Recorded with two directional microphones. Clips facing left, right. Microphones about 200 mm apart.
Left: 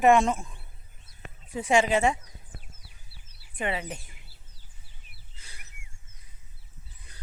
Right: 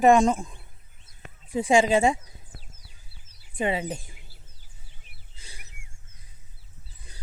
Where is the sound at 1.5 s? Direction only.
30° right (ahead or behind).